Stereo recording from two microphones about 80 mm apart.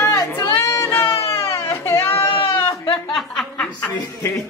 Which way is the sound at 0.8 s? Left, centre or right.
Left.